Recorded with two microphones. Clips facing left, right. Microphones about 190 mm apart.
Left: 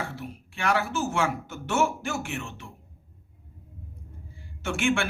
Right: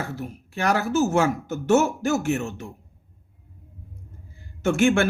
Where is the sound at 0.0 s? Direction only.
45° right (ahead or behind).